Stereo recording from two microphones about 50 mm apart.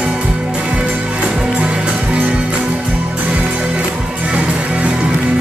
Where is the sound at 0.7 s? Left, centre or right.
Right.